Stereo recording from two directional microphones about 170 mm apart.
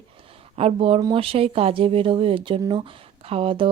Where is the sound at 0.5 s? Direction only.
35° right (ahead or behind).